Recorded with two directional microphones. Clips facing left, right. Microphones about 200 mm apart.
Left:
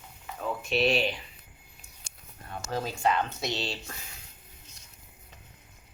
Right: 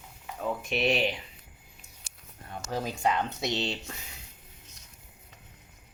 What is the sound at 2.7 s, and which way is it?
Speech, 15° right (ahead or behind).